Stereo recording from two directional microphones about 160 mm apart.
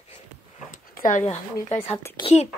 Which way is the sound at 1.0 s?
50° left (ahead or behind).